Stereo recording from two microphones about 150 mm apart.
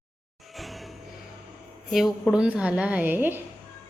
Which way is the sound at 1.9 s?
Centre (ahead or behind).